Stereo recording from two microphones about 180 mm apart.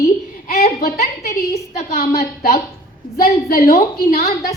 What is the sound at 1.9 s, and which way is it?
A woman's voice, 55° left (ahead or behind).